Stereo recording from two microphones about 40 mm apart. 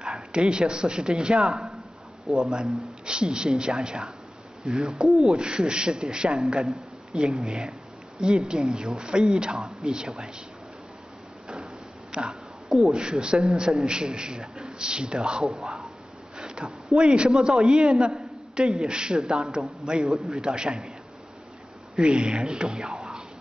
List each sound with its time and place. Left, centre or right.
0.1 s a man's voice: right
11.4 s a sound: right
13.6 s a man's voice: right
21.9 s a man's voice: right